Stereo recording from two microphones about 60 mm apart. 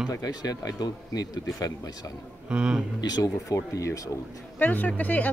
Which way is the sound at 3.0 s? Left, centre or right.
Left.